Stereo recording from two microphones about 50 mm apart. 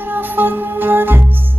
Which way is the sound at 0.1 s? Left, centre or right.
Right.